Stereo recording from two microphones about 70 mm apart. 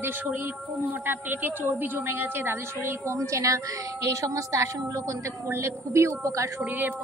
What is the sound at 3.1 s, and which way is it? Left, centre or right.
A woman's voice, right.